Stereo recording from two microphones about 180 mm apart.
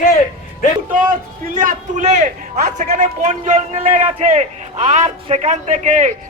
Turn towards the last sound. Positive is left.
turn(degrees=-40)  # may be behind; listen again after turning